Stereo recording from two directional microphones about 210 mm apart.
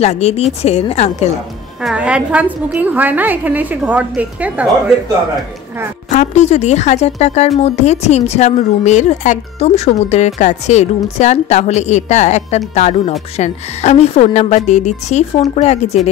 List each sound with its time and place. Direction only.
0.0 s a woman's voice: 30° left (ahead or behind)
1.8 s a woman's voice: 5° right (ahead or behind)
6.0 s a woman's voice: 35° left (ahead or behind)